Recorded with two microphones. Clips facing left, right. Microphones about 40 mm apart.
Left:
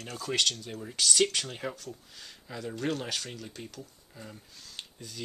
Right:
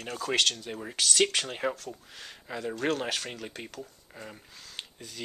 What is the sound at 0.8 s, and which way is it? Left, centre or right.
Speech, right.